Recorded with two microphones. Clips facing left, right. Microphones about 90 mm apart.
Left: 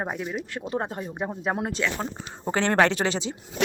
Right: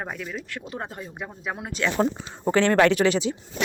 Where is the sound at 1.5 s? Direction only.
45° left (ahead or behind).